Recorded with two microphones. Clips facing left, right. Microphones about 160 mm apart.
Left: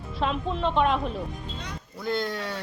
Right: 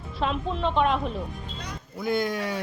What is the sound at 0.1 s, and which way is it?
A woman's voice, centre (ahead or behind).